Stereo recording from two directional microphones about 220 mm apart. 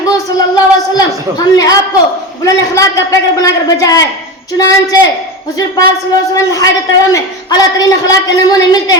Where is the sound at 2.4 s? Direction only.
15° left (ahead or behind).